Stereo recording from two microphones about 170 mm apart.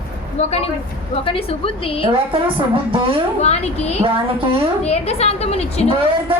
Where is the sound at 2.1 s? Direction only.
30° right (ahead or behind).